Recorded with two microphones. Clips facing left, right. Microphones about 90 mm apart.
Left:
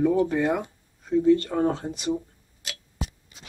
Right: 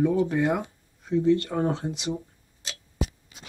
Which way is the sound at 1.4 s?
5° right (ahead or behind).